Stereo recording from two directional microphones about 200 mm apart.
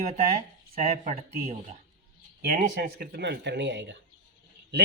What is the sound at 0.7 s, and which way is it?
Speech, 30° right (ahead or behind).